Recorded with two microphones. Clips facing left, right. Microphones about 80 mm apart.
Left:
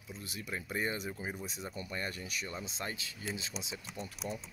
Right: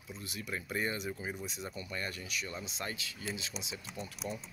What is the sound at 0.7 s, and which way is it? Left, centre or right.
Speech, left.